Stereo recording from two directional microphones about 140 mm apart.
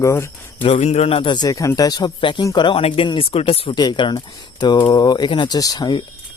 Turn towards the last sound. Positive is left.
turn(degrees=30)  # may be behind; listen again after turning